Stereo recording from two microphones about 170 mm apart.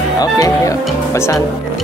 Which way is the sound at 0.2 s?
20° left (ahead or behind).